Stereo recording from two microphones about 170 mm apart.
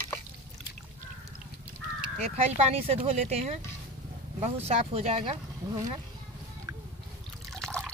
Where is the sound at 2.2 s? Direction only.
35° right (ahead or behind).